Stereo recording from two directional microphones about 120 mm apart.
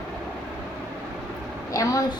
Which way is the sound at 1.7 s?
30° left (ahead or behind).